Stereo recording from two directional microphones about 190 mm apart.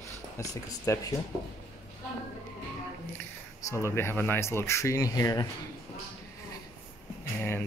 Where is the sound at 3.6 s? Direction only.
15° left (ahead or behind).